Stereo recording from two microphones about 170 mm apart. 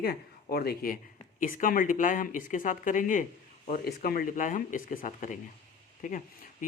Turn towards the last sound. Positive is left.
turn(degrees=50)  # may be behind; listen again after turning